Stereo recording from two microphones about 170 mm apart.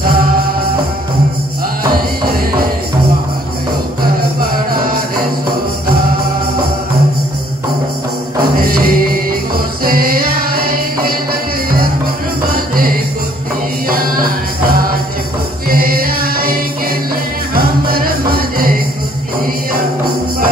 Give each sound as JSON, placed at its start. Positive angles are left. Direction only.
{"t": 8.5, "sound": "music", "side_deg": -60}
{"t": 12.5, "sound": "music", "side_deg": -55}
{"t": 15.7, "sound": "music", "side_deg": -60}
{"t": 17.6, "sound": "music", "side_deg": -60}